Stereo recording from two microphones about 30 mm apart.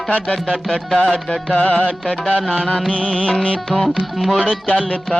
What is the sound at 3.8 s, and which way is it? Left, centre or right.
Speech, centre.